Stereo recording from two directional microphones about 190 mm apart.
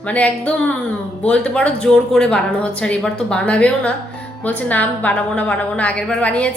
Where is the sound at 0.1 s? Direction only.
5° left (ahead or behind).